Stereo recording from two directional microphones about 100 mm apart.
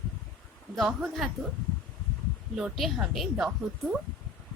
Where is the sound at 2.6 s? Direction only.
5° right (ahead or behind).